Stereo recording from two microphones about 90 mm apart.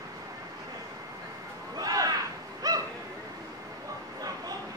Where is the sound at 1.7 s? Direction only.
45° right (ahead or behind).